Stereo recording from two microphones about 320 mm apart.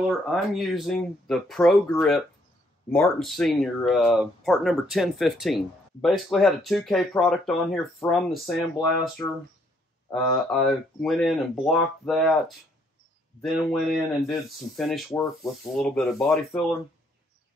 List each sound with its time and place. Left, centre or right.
0.3 s speech: centre